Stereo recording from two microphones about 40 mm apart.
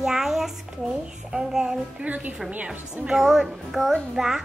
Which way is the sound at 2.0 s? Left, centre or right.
Right.